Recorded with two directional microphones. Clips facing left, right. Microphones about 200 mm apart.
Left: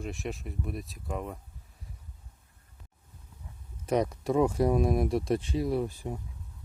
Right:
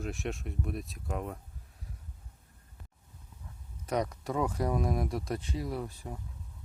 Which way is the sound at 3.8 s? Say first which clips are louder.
Left 4 dB; 25° left (ahead or behind).